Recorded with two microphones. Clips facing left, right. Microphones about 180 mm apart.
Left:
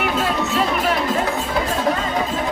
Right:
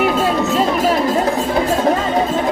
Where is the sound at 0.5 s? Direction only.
40° right (ahead or behind).